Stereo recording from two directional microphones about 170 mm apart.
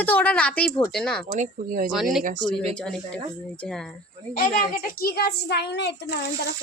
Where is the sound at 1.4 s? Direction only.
50° right (ahead or behind).